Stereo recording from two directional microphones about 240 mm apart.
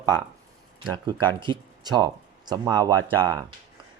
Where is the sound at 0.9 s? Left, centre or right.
Centre.